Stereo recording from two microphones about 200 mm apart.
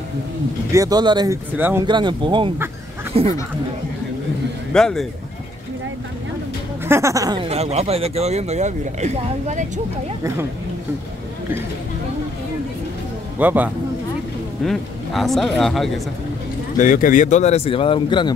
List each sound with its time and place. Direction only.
0.7 s speech: 15° right (ahead or behind)
1.9 s speech: 25° right (ahead or behind)
4.7 s speech: 5° left (ahead or behind)
6.9 s speech: 15° right (ahead or behind)
7.4 s speech: 30° right (ahead or behind)
13.4 s speech: 10° right (ahead or behind)
16.7 s speech: 40° left (ahead or behind); by 18.3 s 25° left (ahead or behind)